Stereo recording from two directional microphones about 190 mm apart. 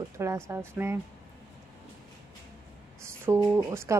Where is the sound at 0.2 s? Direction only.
15° right (ahead or behind).